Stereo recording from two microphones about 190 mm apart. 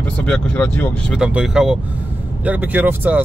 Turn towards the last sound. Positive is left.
turn(degrees=-10)  # may be behind; listen again after turning